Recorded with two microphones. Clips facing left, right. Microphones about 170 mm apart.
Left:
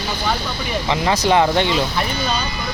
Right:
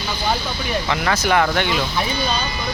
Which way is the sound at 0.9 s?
20° left (ahead or behind).